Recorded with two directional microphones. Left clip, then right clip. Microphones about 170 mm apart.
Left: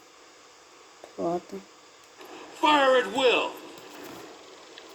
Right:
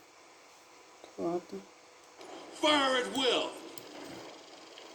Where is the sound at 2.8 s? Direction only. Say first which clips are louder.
Left 8 dB; 45° right (ahead or behind).